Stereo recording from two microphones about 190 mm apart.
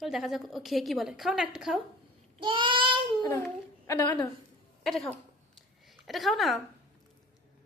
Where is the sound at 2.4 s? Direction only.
25° right (ahead or behind).